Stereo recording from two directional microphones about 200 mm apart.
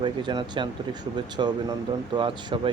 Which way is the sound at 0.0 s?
25° right (ahead or behind).